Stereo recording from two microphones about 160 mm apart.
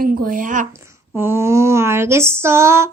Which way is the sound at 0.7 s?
15° right (ahead or behind).